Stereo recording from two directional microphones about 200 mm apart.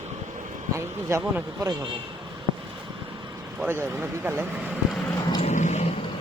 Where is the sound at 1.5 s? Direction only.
20° right (ahead or behind).